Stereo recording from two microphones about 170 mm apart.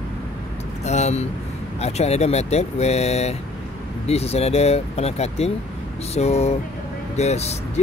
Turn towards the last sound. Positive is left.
turn(degrees=40)  # may be behind; listen again after turning